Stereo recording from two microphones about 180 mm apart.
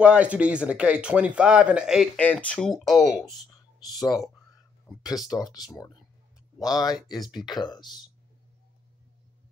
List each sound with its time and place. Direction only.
0.0 s speech: 5° right (ahead or behind)
2.1 s speech: 5° left (ahead or behind)
3.8 s speech: 20° left (ahead or behind)
5.3 s speech: 20° left (ahead or behind)